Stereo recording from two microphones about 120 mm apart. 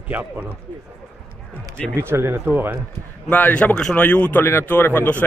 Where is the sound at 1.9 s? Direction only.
20° right (ahead or behind).